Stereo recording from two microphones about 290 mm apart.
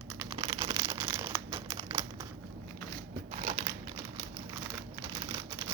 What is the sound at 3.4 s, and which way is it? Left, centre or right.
Crumpling, right.